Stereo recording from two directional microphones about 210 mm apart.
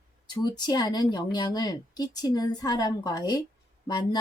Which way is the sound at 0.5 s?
20° left (ahead or behind).